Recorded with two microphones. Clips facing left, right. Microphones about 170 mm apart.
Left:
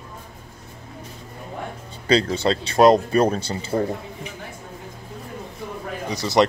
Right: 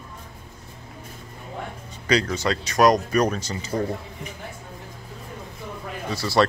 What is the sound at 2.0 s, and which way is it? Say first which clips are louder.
Speech: left 3 dB; 30° left (ahead or behind).